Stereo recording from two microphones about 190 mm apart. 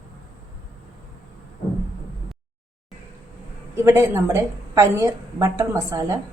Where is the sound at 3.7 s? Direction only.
15° right (ahead or behind).